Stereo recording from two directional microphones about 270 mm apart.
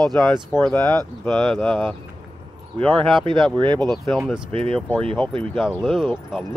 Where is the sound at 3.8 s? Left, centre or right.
Centre.